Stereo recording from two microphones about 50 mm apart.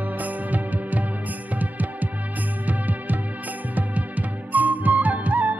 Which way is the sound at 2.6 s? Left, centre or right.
Right.